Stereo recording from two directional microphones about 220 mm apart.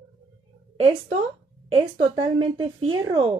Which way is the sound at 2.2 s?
25° right (ahead or behind).